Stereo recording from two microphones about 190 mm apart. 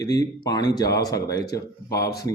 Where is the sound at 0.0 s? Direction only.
20° left (ahead or behind).